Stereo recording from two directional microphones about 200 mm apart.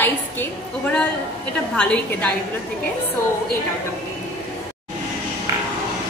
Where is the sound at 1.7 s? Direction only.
5° left (ahead or behind).